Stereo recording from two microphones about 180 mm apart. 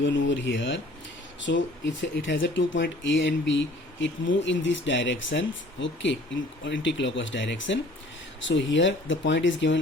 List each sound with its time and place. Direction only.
0.0 s speech: 90° left